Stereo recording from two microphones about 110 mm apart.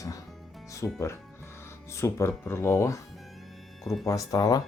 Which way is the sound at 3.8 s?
Centre (ahead or behind).